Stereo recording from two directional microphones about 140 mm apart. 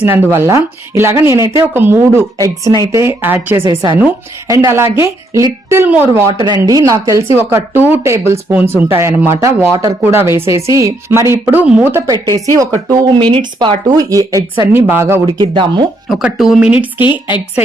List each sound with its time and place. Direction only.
0.0 s speech: 15° right (ahead or behind)
12.0 s speech: 30° right (ahead or behind)
15.4 s speech: 35° right (ahead or behind)
16.0 s speech: centre (ahead or behind)
17.0 s a woman's voice: 35° left (ahead or behind)